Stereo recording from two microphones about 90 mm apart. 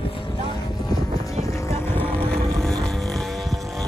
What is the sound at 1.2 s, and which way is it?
Boat, 40° left (ahead or behind).